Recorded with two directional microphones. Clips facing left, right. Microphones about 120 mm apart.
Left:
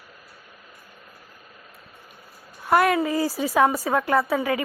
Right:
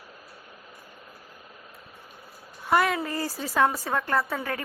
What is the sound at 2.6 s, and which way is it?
A woman's voice, centre (ahead or behind).